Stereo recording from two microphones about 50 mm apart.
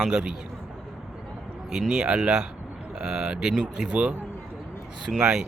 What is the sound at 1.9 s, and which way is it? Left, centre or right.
Speech, right.